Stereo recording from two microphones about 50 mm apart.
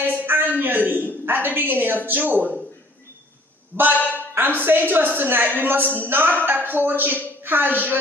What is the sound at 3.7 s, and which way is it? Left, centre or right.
Speech, right.